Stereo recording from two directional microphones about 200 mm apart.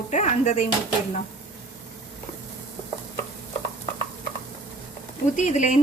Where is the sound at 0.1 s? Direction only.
35° left (ahead or behind).